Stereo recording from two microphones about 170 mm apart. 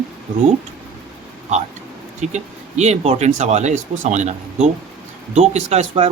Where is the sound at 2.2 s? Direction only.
40° right (ahead or behind).